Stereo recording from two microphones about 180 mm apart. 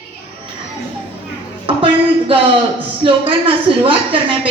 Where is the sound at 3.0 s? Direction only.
30° right (ahead or behind).